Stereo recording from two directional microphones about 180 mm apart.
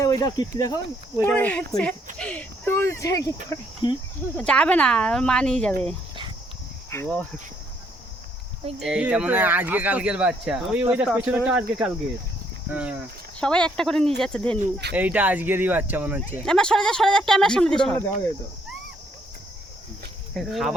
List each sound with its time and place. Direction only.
0.0 s speech: 20° left (ahead or behind)
1.2 s speech: 10° left (ahead or behind)
2.1 s a sound: 5° left (ahead or behind)
3.5 s cricket: 25° left (ahead or behind)
4.4 s speech: 5° left (ahead or behind)
5.8 s dog: 25° right (ahead or behind)
6.9 s speech: 10° left (ahead or behind)
8.8 s speech: 5° right (ahead or behind)
13.4 s speech: 5° left (ahead or behind)
14.9 s speech: 10° right (ahead or behind)
16.4 s speech: 5° left (ahead or behind)
20.3 s speech: centre (ahead or behind)